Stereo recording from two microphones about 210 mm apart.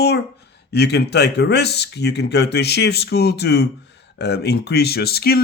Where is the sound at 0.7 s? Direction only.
50° left (ahead or behind).